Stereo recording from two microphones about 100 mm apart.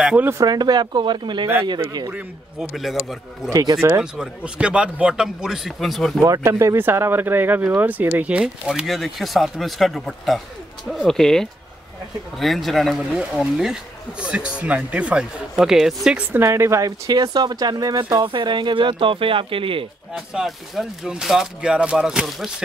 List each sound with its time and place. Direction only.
0.2 s speech: 25° right (ahead or behind)
0.5 s speech: 45° right (ahead or behind)
2.7 s speech: centre (ahead or behind)
3.4 s speech: 40° right (ahead or behind)
4.0 s a man's voice: 10° right (ahead or behind)
6.2 s a man's voice: 30° right (ahead or behind); by 16.2 s 5° right (ahead or behind)
16.4 s speech: 30° right (ahead or behind); by 19.9 s 65° right (ahead or behind)
20.3 s speech: centre (ahead or behind)